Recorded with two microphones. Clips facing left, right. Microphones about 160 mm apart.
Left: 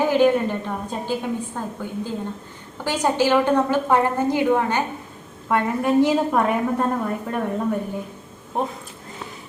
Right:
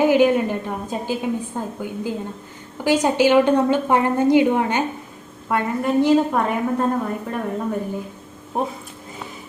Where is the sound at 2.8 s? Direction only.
15° right (ahead or behind).